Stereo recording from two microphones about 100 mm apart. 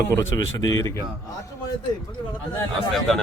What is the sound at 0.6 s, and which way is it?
Speech, 35° left (ahead or behind).